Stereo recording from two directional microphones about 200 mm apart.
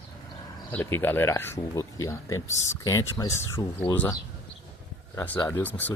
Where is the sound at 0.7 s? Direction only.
10° left (ahead or behind).